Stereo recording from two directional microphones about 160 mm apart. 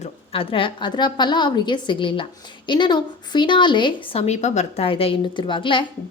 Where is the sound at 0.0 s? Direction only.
35° left (ahead or behind).